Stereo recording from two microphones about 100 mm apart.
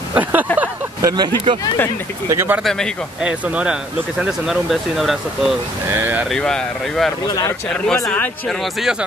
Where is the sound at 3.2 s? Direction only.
15° right (ahead or behind).